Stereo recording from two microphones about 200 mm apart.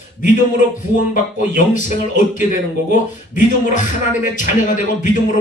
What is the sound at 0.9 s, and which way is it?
Speech, 40° left (ahead or behind).